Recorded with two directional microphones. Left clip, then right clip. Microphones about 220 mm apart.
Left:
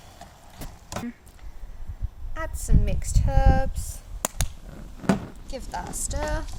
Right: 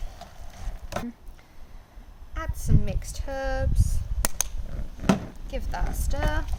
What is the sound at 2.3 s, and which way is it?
Speech, 20° left (ahead or behind).